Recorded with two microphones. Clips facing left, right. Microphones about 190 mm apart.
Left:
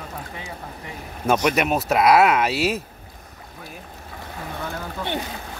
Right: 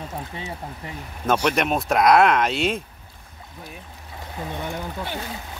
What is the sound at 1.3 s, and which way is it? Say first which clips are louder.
Speech: left 1 dB; 10° left (ahead or behind).